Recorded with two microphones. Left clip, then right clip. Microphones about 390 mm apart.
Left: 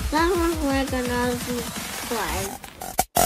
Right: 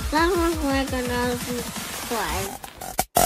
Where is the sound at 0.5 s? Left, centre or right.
Centre.